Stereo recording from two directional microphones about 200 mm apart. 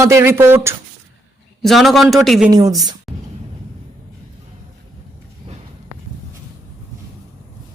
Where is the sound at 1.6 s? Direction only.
Centre (ahead or behind).